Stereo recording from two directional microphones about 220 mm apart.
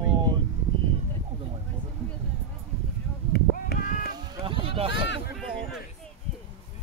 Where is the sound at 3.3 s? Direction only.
45° left (ahead or behind).